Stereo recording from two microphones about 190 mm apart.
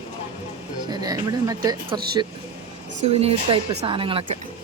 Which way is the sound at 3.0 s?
30° right (ahead or behind).